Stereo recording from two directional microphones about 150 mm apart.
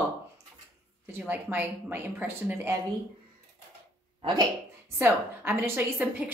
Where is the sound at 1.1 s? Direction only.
10° right (ahead or behind).